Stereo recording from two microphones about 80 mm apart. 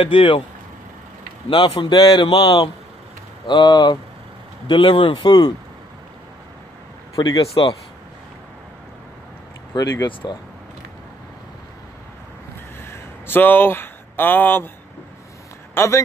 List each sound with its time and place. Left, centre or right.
0.0 s a man's voice: left
1.5 s a man's voice: left
4.6 s speech: left
7.2 s a man's voice: left
9.7 s speech: left
12.9 s speech: left
15.7 s speech: left